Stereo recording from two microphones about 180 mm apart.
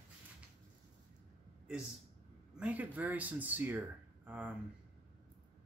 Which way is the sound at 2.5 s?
10° right (ahead or behind).